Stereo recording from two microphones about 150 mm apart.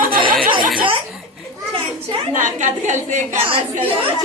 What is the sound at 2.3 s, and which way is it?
A woman's voice, 55° right (ahead or behind).